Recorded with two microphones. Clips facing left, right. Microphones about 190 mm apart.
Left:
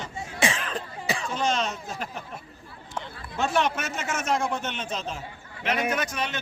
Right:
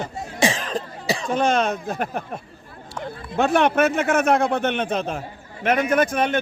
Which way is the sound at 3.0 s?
60° right (ahead or behind).